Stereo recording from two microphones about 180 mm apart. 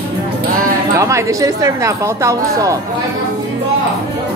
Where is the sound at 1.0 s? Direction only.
15° right (ahead or behind).